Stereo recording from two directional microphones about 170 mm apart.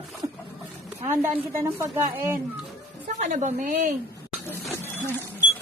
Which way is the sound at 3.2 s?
45° right (ahead or behind).